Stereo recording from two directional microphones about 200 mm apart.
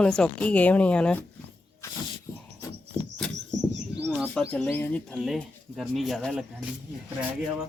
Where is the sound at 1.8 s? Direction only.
15° left (ahead or behind).